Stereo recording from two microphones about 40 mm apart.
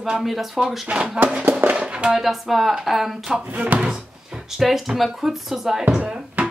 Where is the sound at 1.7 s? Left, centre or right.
Right.